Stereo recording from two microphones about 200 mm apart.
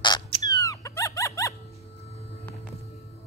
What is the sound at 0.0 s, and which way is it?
Rodents, 20° left (ahead or behind).